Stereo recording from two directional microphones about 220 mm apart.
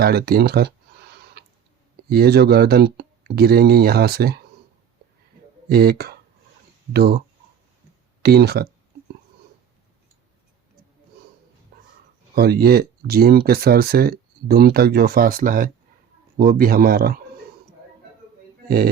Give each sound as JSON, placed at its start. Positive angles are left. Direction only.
{"t": 0.0, "sound": "a sound", "side_deg": -45}
{"t": 2.0, "sound": "speech", "side_deg": -45}
{"t": 5.7, "sound": "speech", "side_deg": -45}
{"t": 8.2, "sound": "speech", "side_deg": -45}
{"t": 12.3, "sound": "speech", "side_deg": -45}